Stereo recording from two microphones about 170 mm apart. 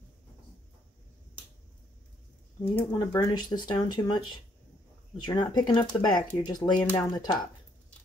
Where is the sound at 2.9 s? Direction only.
25° left (ahead or behind).